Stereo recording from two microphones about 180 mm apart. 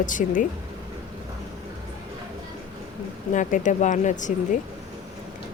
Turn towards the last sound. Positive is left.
turn(degrees=45)  # may be behind; listen again after turning